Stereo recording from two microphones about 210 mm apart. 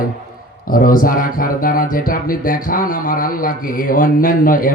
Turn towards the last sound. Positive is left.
turn(degrees=40)  # may be behind; listen again after turning